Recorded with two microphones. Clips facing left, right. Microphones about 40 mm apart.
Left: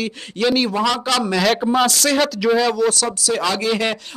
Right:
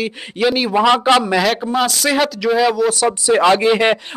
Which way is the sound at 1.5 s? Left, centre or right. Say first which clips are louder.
Left 1 dB; centre.